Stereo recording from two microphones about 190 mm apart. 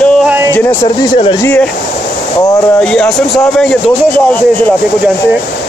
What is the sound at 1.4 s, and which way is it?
Speech, 5° left (ahead or behind).